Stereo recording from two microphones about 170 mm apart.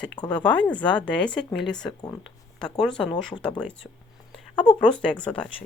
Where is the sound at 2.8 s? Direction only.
5° left (ahead or behind).